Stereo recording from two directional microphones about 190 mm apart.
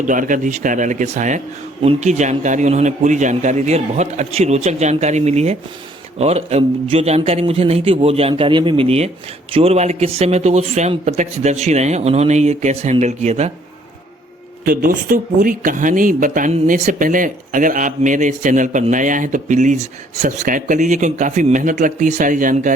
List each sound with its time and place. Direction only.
0.1 s speech: 45° right (ahead or behind)
14.6 s speech: 50° right (ahead or behind)